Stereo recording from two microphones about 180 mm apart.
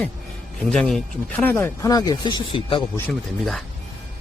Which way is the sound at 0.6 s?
5° left (ahead or behind).